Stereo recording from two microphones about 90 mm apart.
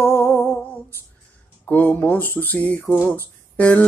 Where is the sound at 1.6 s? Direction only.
20° left (ahead or behind).